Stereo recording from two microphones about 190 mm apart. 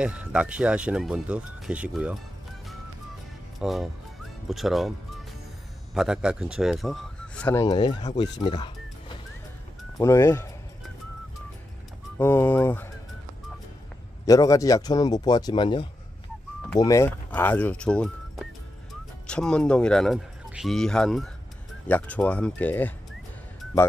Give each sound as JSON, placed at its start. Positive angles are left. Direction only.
{"t": 0.0, "sound": "speech", "side_deg": -5}
{"t": 3.5, "sound": "music", "side_deg": 0}
{"t": 5.9, "sound": "speech", "side_deg": -5}
{"t": 8.2, "sound": "music", "side_deg": 25}
{"t": 9.9, "sound": "speech", "side_deg": 15}
{"t": 12.2, "sound": "speech", "side_deg": 10}
{"t": 14.2, "sound": "speech", "side_deg": 20}